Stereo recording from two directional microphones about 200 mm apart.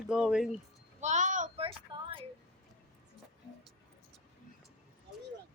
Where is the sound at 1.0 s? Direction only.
35° right (ahead or behind).